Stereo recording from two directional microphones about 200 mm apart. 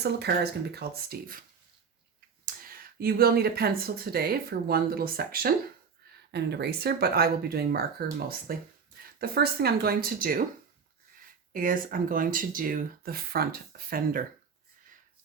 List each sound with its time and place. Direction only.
0.0 s speech: 55° right (ahead or behind)
2.4 s speech: 45° right (ahead or behind)
11.5 s speech: 45° right (ahead or behind)